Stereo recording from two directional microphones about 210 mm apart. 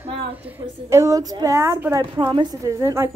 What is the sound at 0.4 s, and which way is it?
A woman's voice, 10° right (ahead or behind).